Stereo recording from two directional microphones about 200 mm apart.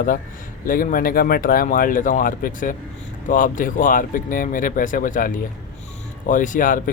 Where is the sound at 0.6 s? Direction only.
45° left (ahead or behind).